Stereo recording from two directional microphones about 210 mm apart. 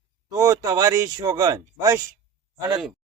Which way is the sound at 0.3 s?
15° right (ahead or behind).